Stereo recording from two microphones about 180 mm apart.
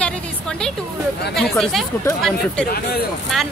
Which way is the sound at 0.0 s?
5° left (ahead or behind).